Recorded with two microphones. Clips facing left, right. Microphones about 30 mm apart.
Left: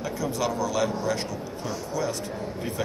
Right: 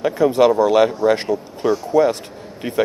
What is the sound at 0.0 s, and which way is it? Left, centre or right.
Speech, right.